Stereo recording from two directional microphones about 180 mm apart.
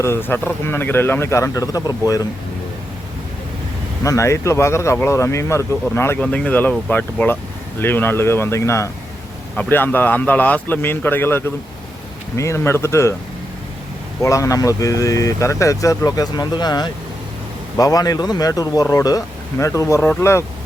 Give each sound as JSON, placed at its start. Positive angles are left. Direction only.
{"t": 0.0, "sound": "speech", "side_deg": 15}
{"t": 4.0, "sound": "speech", "side_deg": 15}
{"t": 14.2, "sound": "speech", "side_deg": 15}